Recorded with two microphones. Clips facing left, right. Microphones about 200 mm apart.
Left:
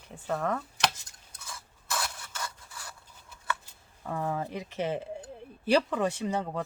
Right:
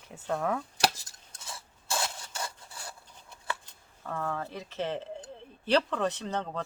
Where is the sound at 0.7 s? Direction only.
35° right (ahead or behind).